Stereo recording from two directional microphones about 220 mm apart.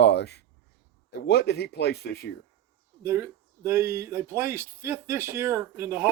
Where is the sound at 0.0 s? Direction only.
50° left (ahead or behind).